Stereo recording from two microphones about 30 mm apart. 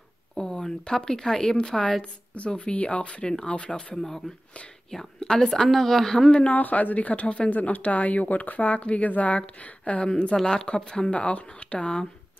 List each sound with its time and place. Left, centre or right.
0.4 s speech: left
2.3 s speech: left
5.2 s speech: left
5.7 s a woman's voice: centre
6.5 s speech: left
7.4 s speech: left
10.0 s speech: left
11.1 s speech: left